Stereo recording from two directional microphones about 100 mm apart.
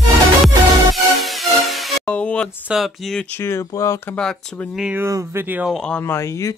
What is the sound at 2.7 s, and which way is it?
Speech, centre (ahead or behind).